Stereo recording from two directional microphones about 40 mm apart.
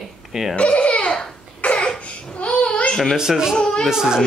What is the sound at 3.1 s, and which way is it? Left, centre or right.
Speech, centre.